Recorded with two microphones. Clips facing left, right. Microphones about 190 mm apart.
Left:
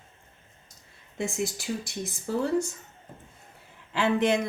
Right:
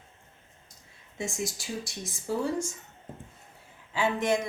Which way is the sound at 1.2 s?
60° left (ahead or behind).